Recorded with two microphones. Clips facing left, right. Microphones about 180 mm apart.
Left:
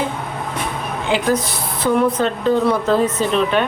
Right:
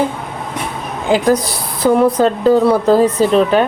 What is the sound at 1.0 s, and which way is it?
A woman's voice, 40° right (ahead or behind).